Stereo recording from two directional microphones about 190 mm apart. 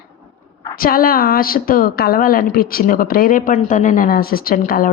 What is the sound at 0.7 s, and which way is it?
A woman's voice, 50° left (ahead or behind).